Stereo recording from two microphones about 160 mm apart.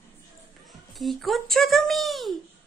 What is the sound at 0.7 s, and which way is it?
A child's voice, centre (ahead or behind).